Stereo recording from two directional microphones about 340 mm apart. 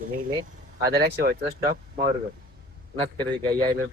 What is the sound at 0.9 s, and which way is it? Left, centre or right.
Speech, right.